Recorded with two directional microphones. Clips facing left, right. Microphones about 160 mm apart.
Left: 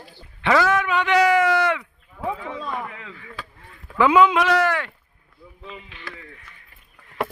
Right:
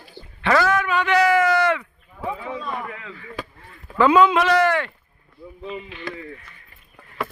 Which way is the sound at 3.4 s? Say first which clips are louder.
Right 7 dB; 15° right (ahead or behind).